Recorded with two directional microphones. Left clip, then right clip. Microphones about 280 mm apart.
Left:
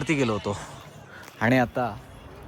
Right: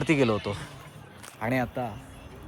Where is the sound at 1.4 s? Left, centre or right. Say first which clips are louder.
Left 6 dB; left.